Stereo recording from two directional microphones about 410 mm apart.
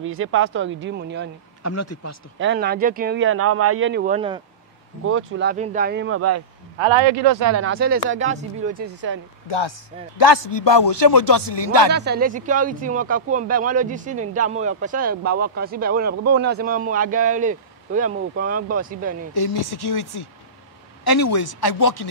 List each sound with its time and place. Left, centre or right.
0.0 s speech: right
1.6 s speech: left
2.3 s speech: right
5.0 s speech: right
6.8 s a man's voice: right
7.2 s speech: right
7.6 s speech: right
9.6 s a man's voice: left
11.9 s speech: right
19.3 s speech: left